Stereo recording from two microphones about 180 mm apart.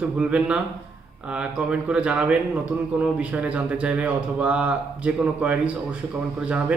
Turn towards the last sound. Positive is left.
turn(degrees=-5)  # may be behind; listen again after turning